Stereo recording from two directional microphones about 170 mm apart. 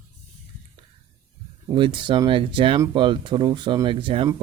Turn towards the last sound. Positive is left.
turn(degrees=-30)  # may be behind; listen again after turning